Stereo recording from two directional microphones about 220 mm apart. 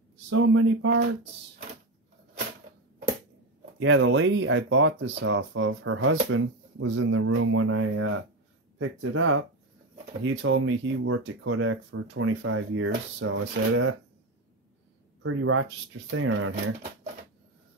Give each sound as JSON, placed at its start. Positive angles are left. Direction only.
{"t": 0.3, "sound": "speech", "side_deg": -65}
{"t": 3.8, "sound": "speech", "side_deg": -60}
{"t": 15.2, "sound": "speech", "side_deg": -70}